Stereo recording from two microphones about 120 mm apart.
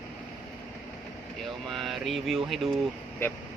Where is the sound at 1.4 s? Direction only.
Centre (ahead or behind).